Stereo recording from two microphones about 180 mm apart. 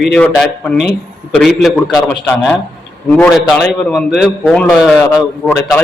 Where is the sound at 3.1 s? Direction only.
5° left (ahead or behind).